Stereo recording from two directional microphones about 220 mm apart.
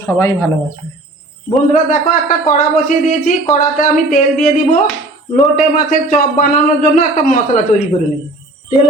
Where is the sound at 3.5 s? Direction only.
35° left (ahead or behind).